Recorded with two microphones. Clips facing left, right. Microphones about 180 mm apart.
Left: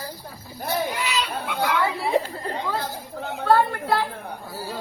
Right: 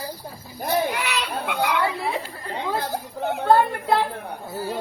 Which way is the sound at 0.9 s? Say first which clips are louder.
Even; 60° right (ahead or behind).